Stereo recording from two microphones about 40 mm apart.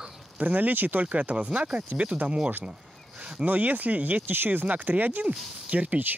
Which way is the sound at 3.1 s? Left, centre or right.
Right.